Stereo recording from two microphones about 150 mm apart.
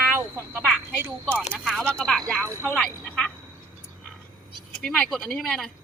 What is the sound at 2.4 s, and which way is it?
Speech, 20° right (ahead or behind).